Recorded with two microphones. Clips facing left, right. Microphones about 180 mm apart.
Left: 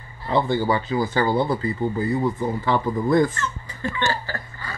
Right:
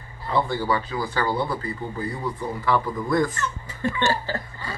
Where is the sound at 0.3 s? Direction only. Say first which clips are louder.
Left 3 dB; 25° left (ahead or behind).